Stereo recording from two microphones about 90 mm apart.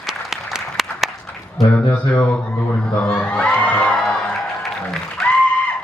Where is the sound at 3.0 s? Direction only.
10° left (ahead or behind).